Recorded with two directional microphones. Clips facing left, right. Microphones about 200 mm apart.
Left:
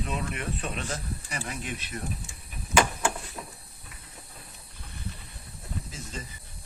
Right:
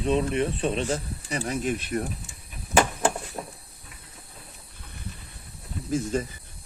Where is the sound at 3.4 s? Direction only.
45° right (ahead or behind).